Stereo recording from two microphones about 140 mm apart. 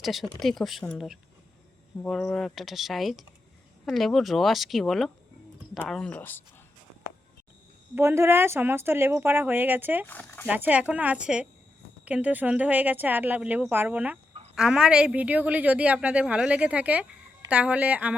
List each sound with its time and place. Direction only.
0.0 s speech: centre (ahead or behind)
7.9 s a woman's voice: 20° right (ahead or behind)
10.1 s speech: 10° left (ahead or behind)
10.5 s a woman's voice: 10° right (ahead or behind)